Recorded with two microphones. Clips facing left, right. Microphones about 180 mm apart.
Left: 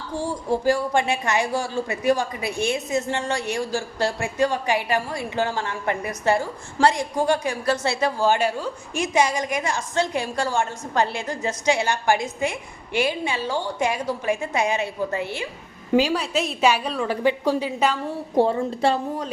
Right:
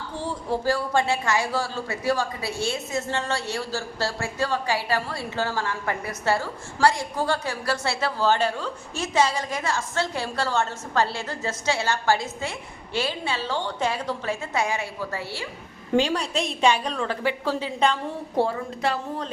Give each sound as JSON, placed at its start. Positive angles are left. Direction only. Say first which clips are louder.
{"t": 0.1, "sound": "speech", "louder": "left 4 dB", "side_deg": 10}
{"t": 15.9, "sound": "speech", "louder": "left 2 dB", "side_deg": 5}
{"t": 18.5, "sound": "speech", "louder": "left 5 dB", "side_deg": 30}